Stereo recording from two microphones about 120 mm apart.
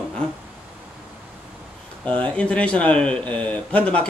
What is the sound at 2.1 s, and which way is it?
Speech, 10° left (ahead or behind).